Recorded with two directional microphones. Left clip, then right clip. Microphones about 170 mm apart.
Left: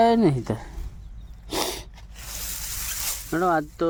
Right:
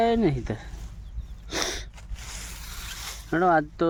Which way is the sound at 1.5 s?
20° left (ahead or behind).